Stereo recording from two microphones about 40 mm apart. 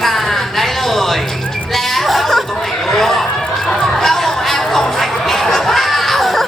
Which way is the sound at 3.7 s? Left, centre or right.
Centre.